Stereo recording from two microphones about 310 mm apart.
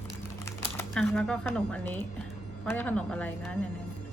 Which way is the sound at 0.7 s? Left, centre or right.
Centre.